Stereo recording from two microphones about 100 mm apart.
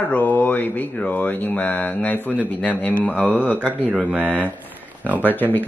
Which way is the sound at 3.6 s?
10° right (ahead or behind).